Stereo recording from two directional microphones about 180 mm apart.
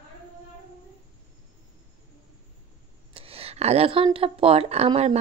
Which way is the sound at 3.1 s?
30° right (ahead or behind).